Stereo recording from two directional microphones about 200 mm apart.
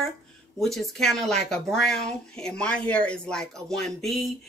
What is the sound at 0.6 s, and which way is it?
Speech, centre (ahead or behind).